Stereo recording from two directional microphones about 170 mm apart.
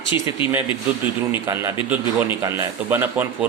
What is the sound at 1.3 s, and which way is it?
A man's voice, 15° right (ahead or behind).